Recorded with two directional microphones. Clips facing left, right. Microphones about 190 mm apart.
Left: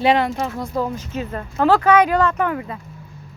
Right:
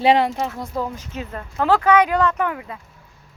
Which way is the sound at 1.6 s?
15° right (ahead or behind).